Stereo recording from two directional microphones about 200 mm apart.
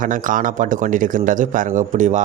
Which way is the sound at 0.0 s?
40° right (ahead or behind).